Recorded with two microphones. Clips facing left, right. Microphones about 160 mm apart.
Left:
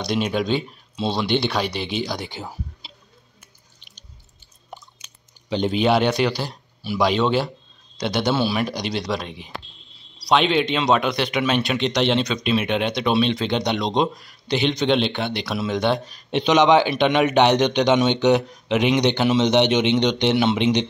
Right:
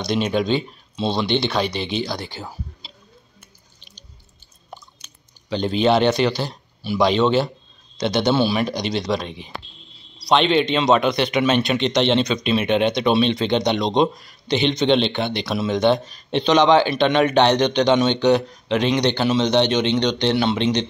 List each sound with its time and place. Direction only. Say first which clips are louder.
0.0 s speech: right 2 dB; 5° left (ahead or behind)
5.5 s speech: right 1 dB; 15° left (ahead or behind)